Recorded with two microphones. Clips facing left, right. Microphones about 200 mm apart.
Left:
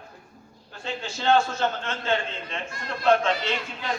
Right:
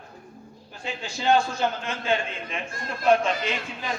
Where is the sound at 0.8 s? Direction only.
10° right (ahead or behind).